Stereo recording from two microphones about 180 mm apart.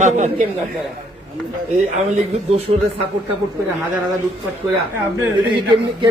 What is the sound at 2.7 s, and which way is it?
Speech, 35° right (ahead or behind).